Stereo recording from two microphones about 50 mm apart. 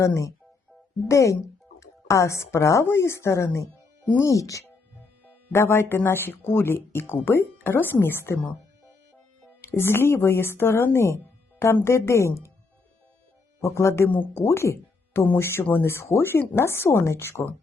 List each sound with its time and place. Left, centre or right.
0.0 s a woman's voice: left
2.8 s a woman's voice: left
4.2 s speech: left
5.5 s a woman's voice: left
9.6 s a woman's voice: left
13.6 s a woman's voice: left
15.6 s speech: left
15.9 s a woman's voice: left